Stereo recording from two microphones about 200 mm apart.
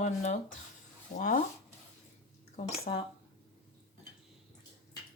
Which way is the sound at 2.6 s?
30° left (ahead or behind).